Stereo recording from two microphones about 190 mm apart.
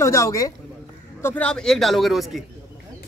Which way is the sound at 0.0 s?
15° left (ahead or behind).